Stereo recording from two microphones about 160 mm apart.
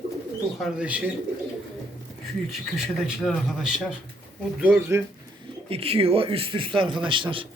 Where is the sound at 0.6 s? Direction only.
5° right (ahead or behind).